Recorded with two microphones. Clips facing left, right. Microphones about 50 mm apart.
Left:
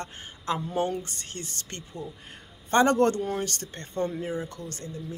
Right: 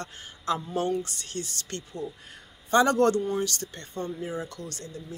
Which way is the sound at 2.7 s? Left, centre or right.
Left.